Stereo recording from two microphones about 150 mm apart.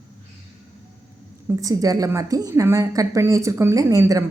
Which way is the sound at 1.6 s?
25° right (ahead or behind).